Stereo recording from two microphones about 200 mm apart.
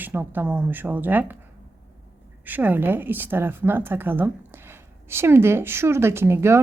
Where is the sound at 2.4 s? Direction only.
10° right (ahead or behind).